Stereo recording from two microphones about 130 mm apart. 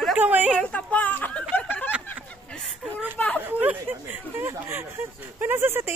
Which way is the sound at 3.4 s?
15° right (ahead or behind).